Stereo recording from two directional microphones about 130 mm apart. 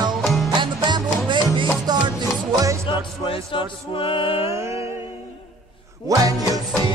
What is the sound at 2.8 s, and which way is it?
Music, 40° left (ahead or behind).